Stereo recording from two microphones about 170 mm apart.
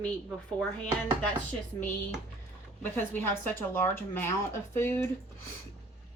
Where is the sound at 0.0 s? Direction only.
5° left (ahead or behind).